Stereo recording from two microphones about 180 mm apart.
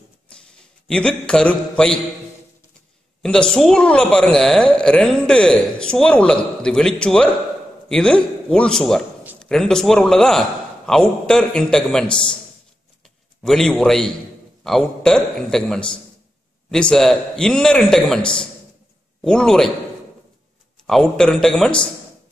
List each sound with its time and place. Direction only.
0.5 s a man's voice: 5° left (ahead or behind)
3.2 s a woman's voice: 5° left (ahead or behind)
13.4 s a woman's voice: 5° left (ahead or behind)
20.8 s a woman's voice: centre (ahead or behind)